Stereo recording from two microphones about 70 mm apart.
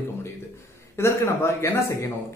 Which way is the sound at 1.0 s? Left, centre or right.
Left.